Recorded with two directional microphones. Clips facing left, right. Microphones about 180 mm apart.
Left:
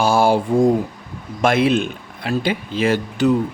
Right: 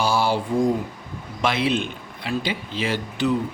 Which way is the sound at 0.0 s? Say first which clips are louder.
Left 6 dB; 50° left (ahead or behind).